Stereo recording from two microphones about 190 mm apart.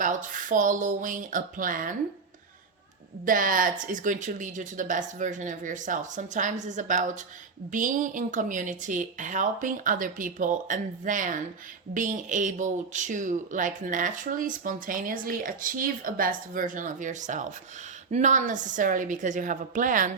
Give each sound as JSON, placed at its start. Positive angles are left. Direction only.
{"t": 0.0, "sound": "speech", "side_deg": -45}
{"t": 3.2, "sound": "speech", "side_deg": -45}